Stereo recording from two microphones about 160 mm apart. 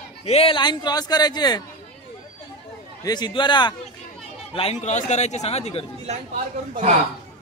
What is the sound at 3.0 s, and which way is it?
Speech, 25° left (ahead or behind).